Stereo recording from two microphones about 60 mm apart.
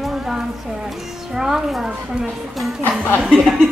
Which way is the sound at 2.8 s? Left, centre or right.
Left.